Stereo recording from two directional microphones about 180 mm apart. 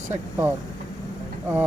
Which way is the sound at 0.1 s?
15° right (ahead or behind).